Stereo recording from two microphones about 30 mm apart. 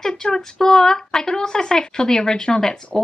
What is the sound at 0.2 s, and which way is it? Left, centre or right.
A woman's voice, left.